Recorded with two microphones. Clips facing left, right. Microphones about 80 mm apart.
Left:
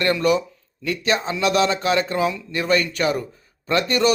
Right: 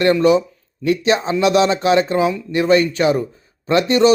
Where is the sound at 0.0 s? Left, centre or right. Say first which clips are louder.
Right 6 dB; centre.